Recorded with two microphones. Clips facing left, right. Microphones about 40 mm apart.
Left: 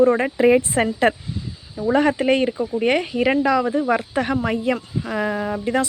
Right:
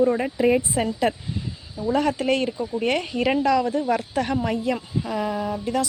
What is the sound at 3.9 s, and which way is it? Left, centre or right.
Speech, left.